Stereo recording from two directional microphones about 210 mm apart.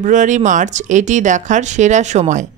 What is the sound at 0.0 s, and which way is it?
A woman's voice, 35° right (ahead or behind).